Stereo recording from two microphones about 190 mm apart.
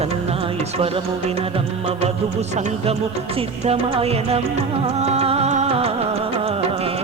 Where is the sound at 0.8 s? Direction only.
30° right (ahead or behind).